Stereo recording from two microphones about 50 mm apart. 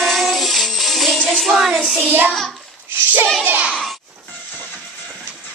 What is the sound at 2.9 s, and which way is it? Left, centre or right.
Speech, right.